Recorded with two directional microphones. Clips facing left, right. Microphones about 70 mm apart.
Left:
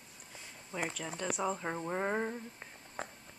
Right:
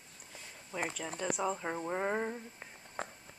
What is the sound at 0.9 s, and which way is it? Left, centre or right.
Speech, centre.